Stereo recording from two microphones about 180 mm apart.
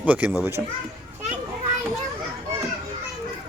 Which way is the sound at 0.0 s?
10° right (ahead or behind).